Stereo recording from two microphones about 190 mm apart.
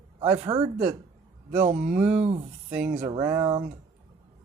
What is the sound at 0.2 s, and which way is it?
Speech, 30° right (ahead or behind).